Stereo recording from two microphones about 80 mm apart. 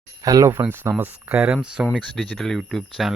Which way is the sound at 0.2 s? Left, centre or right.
Right.